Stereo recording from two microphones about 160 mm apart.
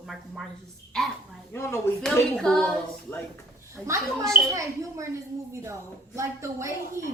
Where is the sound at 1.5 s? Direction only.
15° left (ahead or behind).